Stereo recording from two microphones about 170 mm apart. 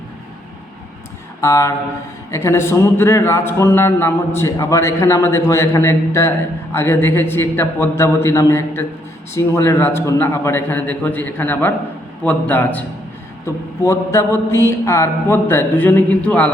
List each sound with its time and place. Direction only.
1.4 s a man's voice: 15° left (ahead or behind)